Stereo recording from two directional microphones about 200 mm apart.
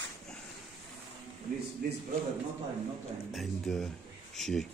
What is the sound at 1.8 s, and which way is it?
Speech, 50° right (ahead or behind).